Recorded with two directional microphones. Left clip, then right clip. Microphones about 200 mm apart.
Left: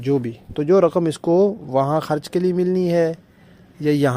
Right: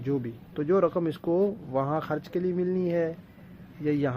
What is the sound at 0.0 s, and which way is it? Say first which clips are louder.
Speech: left 10 dB; 40° left (ahead or behind).